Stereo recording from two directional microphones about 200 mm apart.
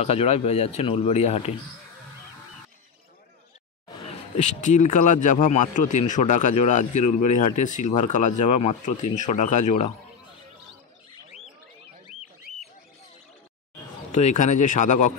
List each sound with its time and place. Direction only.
0.0 s a man's voice: 30° left (ahead or behind)
4.0 s a man's voice: 35° left (ahead or behind)
12.5 s a sound: centre (ahead or behind)
14.1 s a man's voice: 35° left (ahead or behind)